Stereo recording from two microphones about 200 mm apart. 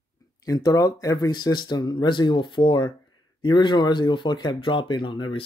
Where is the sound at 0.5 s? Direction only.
20° left (ahead or behind).